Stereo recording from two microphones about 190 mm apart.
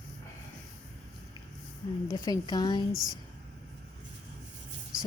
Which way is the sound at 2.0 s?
20° left (ahead or behind).